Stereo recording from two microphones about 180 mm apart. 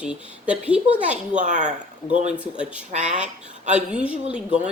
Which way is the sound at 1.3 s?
45° right (ahead or behind).